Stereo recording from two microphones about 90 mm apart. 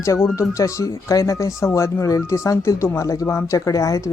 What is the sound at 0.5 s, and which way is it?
Speech, 35° left (ahead or behind).